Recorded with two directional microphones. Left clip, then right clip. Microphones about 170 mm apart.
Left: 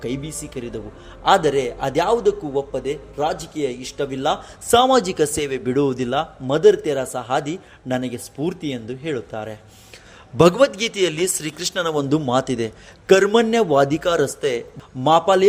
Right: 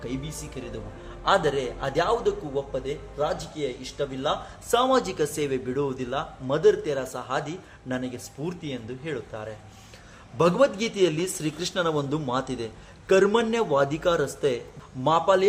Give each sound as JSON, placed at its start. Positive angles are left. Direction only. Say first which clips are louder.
{"t": 0.0, "sound": "a man's voice", "louder": "left 7 dB", "side_deg": 35}